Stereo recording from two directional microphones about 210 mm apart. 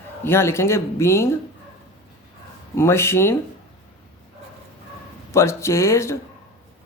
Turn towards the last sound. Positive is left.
turn(degrees=15)  # may be behind; listen again after turning